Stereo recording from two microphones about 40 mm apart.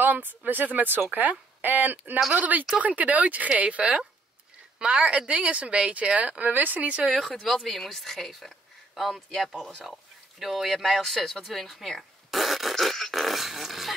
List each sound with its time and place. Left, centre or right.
0.0 s a sound: right
0.5 s a woman's voice: right
6.5 s speech: right
7.4 s speech: centre
10.4 s speech: centre
12.3 s dog: centre
13.1 s speech: centre